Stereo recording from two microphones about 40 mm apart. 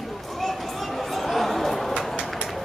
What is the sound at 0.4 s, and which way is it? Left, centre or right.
Chatter, centre.